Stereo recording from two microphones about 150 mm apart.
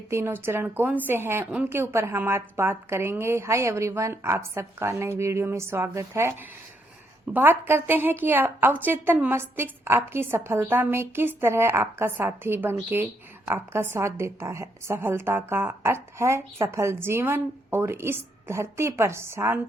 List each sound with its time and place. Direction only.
0.1 s a woman's voice: 15° right (ahead or behind)
7.3 s a woman's voice: 15° right (ahead or behind)